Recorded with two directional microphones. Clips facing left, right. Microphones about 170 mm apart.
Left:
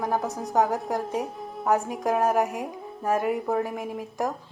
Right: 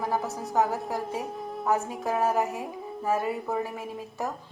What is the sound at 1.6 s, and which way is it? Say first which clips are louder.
A woman's voice: left 3 dB; 15° left (ahead or behind).